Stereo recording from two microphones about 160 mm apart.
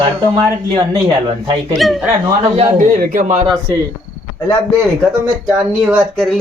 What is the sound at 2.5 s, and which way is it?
Speech, 45° right (ahead or behind).